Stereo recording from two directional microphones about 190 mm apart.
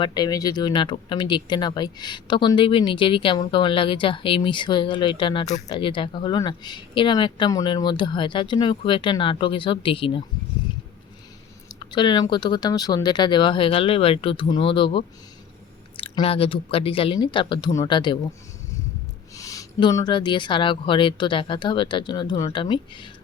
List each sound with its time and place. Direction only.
0.0 s speech: 20° left (ahead or behind)
11.8 s speech: 25° left (ahead or behind)
19.4 s speech: 20° left (ahead or behind)